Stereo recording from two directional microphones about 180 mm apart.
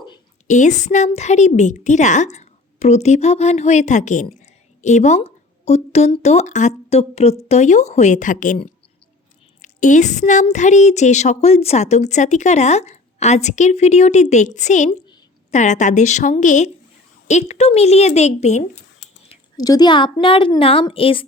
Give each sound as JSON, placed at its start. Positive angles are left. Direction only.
{"t": 0.4, "sound": "a woman's voice", "side_deg": 40}
{"t": 9.6, "sound": "a woman's voice", "side_deg": 45}
{"t": 19.5, "sound": "a woman's voice", "side_deg": 20}